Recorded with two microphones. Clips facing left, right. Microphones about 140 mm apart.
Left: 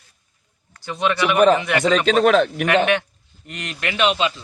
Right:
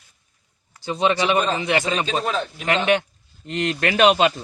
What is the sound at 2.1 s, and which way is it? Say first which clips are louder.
Speech: left 9 dB; 75° left (ahead or behind).